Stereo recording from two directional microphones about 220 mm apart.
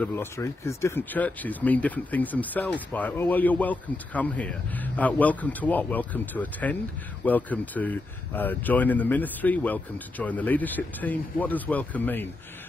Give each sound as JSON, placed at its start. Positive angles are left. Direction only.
{"t": 0.0, "sound": "speech", "side_deg": 10}